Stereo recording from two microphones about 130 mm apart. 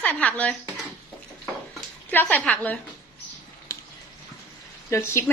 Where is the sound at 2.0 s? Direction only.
15° left (ahead or behind).